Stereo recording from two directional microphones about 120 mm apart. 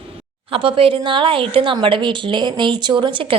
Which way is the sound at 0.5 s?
50° right (ahead or behind).